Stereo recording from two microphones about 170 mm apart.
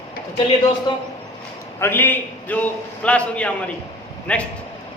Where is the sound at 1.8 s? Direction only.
10° left (ahead or behind).